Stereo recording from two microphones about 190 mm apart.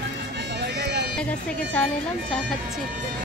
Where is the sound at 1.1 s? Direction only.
5° left (ahead or behind).